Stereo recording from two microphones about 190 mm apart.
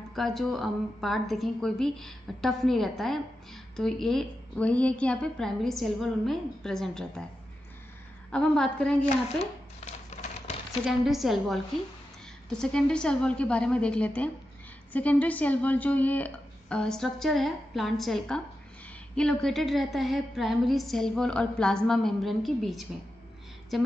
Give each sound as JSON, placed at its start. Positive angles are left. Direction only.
{"t": 0.1, "sound": "a woman's voice", "side_deg": 0}
{"t": 8.3, "sound": "a woman's voice", "side_deg": 5}
{"t": 10.0, "sound": "typewriter", "side_deg": 35}
{"t": 10.9, "sound": "a woman's voice", "side_deg": 0}